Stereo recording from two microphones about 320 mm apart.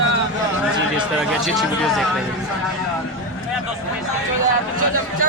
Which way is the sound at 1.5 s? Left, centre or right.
Centre.